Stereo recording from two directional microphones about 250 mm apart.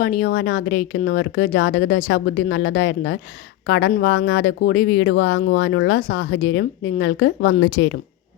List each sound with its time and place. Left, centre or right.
0.0 s speech: left